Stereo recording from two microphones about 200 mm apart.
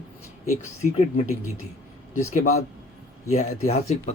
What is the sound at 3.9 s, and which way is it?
Speech, 35° left (ahead or behind).